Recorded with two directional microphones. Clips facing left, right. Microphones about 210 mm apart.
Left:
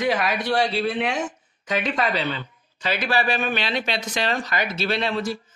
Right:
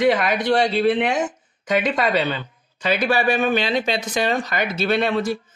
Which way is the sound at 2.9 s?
55° right (ahead or behind).